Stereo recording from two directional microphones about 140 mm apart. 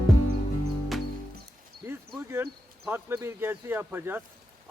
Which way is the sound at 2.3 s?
15° right (ahead or behind).